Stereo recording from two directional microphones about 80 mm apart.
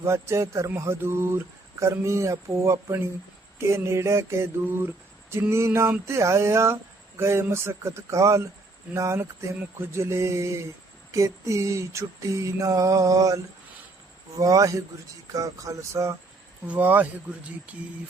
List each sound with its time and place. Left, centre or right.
0.0 s speech: right
11.1 s a sound: right
16.6 s speech: right